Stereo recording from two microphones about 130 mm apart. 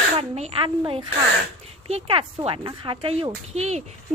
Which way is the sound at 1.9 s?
50° right (ahead or behind).